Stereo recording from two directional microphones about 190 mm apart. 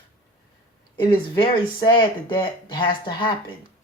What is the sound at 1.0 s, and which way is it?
Speech, 25° left (ahead or behind).